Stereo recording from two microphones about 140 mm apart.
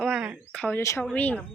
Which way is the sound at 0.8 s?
20° left (ahead or behind).